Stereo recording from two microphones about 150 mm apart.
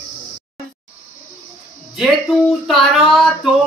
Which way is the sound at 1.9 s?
Centre (ahead or behind).